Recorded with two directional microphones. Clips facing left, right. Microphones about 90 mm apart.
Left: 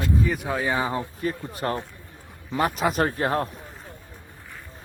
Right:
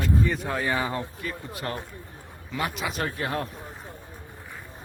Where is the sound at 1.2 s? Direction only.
35° left (ahead or behind).